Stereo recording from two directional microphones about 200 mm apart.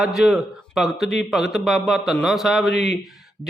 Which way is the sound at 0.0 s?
Centre (ahead or behind).